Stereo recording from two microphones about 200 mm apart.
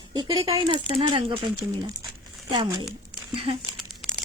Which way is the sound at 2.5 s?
25° right (ahead or behind).